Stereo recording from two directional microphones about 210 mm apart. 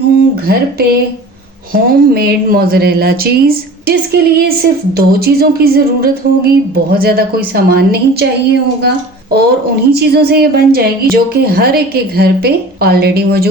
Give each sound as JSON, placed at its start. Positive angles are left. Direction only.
{"t": 0.3, "sound": "speech", "side_deg": -50}
{"t": 9.9, "sound": "speech", "side_deg": -50}